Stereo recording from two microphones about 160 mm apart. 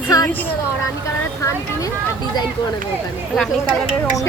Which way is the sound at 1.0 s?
20° left (ahead or behind).